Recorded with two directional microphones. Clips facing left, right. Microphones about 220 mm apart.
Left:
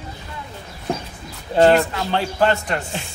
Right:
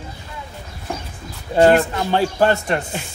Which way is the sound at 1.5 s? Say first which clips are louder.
Right 1 dB; 10° right (ahead or behind).